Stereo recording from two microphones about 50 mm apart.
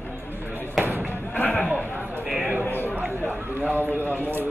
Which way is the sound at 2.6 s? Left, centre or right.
Left.